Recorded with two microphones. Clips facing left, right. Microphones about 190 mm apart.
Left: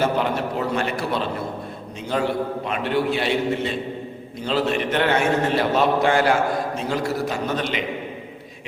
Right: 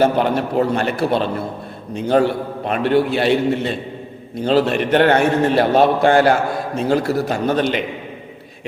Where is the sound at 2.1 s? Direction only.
55° right (ahead or behind).